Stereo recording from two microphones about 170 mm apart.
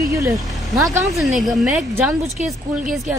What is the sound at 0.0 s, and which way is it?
Vehicle, 20° right (ahead or behind).